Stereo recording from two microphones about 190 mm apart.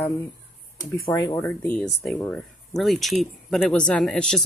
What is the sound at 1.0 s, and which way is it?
Speech, 20° left (ahead or behind).